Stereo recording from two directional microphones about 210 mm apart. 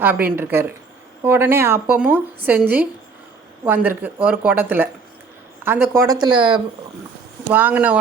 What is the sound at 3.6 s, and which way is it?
Speech, 10° right (ahead or behind).